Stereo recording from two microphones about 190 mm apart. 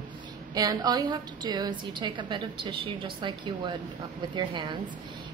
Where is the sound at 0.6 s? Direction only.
20° right (ahead or behind).